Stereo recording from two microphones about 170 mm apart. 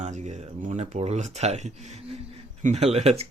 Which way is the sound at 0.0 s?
45° right (ahead or behind).